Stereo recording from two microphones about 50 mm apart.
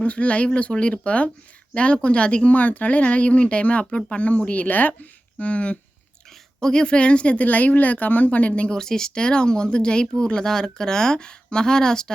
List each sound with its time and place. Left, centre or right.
0.0 s speech: left
5.4 s speech: left
6.6 s speech: centre
8.7 s speech: centre